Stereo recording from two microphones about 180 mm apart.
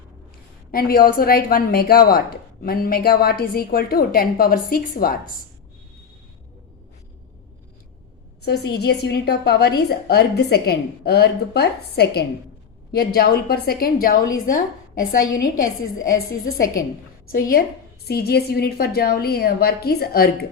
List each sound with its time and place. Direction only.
0.7 s a woman's voice: 55° left (ahead or behind)
8.4 s a woman's voice: 65° left (ahead or behind); by 16.1 s 50° left (ahead or behind)
18.1 s a woman's voice: 60° left (ahead or behind)